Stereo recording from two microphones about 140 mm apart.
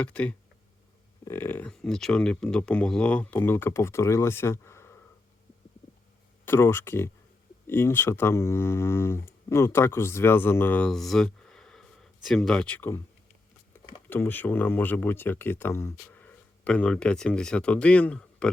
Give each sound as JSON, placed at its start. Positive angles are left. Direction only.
{"t": 0.0, "sound": "speech", "side_deg": 10}
{"t": 1.7, "sound": "speech", "side_deg": 5}
{"t": 6.4, "sound": "speech", "side_deg": 15}
{"t": 14.1, "sound": "speech", "side_deg": 15}